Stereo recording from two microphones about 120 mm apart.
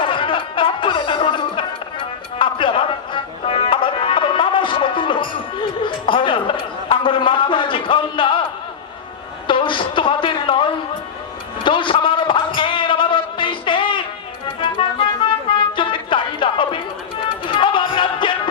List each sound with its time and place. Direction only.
0.0 s music: 45° left (ahead or behind)
9.5 s a sound: 45° left (ahead or behind)
14.4 s music: 45° left (ahead or behind)